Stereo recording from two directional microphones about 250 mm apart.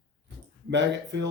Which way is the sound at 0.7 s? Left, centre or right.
Right.